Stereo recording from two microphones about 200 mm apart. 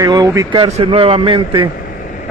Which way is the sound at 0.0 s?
20° right (ahead or behind).